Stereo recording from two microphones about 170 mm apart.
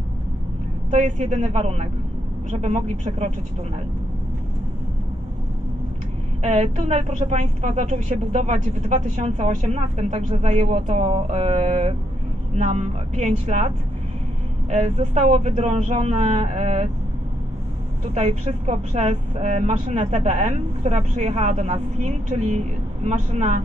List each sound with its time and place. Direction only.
0.8 s speech: 45° right (ahead or behind)
6.4 s speech: 40° right (ahead or behind)
14.7 s speech: 45° right (ahead or behind)
18.1 s speech: 40° right (ahead or behind)